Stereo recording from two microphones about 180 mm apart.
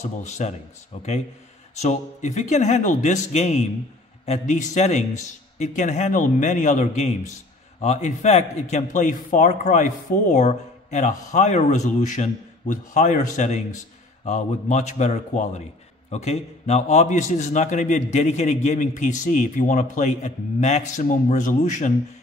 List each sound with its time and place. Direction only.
0.0 s a man's voice: 40° left (ahead or behind)